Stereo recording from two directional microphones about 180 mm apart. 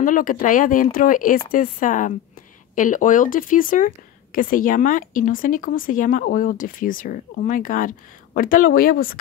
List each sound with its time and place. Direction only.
0.0 s speech: 50° left (ahead or behind)